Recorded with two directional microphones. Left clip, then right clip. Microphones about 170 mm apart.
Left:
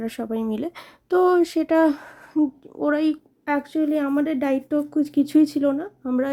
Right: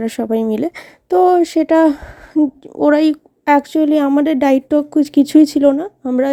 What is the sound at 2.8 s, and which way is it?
Speech, 35° right (ahead or behind).